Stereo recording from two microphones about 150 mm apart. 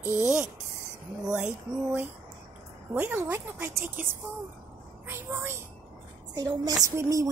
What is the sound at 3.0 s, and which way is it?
A woman's voice, 15° right (ahead or behind).